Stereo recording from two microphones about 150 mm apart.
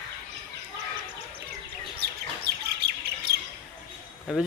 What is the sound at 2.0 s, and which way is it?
Bird, 90° right.